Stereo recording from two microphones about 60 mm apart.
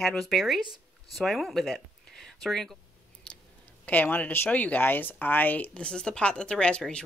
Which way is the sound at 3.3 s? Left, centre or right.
Centre.